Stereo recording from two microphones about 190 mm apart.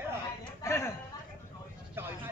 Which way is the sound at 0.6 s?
15° left (ahead or behind).